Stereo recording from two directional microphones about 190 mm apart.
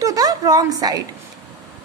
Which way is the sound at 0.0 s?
20° right (ahead or behind).